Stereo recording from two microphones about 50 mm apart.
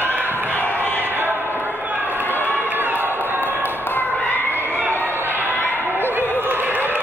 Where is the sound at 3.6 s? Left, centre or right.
Left.